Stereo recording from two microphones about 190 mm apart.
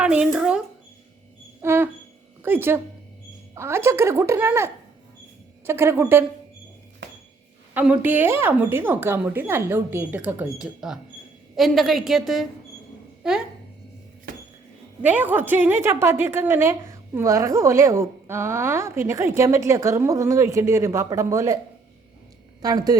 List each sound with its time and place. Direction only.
0.0 s a sound: 5° right (ahead or behind)
1.6 s a sound: 10° right (ahead or behind)
2.4 s a woman's voice: 10° right (ahead or behind)
7.7 s a woman's voice: 10° right (ahead or behind)
15.0 s a woman's voice: 10° right (ahead or behind)
22.6 s speech: 20° right (ahead or behind)